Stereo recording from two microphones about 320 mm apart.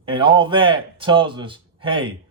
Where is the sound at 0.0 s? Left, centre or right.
Centre.